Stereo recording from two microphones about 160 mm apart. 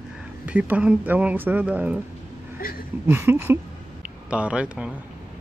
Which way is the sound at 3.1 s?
15° right (ahead or behind).